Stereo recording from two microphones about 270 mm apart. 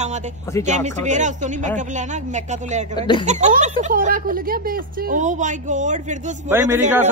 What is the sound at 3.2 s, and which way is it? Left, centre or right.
Speech, right.